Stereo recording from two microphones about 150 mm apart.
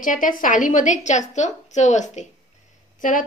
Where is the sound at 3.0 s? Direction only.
60° left (ahead or behind).